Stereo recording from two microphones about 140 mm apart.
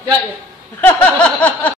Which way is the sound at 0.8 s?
10° left (ahead or behind).